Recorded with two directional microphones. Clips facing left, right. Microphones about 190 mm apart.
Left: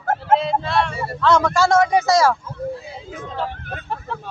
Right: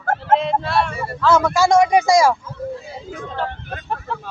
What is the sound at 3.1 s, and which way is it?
Speech, 5° left (ahead or behind).